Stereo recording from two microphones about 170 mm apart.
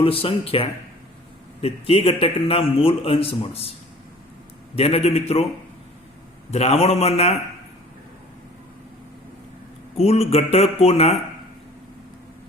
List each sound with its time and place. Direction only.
0.0 s a man's voice: 35° left (ahead or behind)
4.7 s a man's voice: 35° left (ahead or behind)
6.5 s a man's voice: 40° left (ahead or behind)
10.0 s a man's voice: 40° left (ahead or behind)